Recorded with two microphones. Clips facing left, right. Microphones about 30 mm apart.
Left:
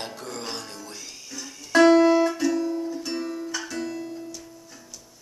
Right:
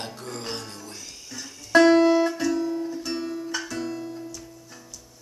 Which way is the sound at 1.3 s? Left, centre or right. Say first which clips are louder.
Right 2 dB; centre.